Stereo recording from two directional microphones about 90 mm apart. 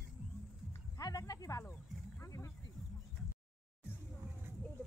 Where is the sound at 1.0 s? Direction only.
40° left (ahead or behind).